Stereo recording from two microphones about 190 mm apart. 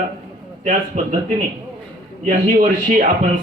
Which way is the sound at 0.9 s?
35° right (ahead or behind).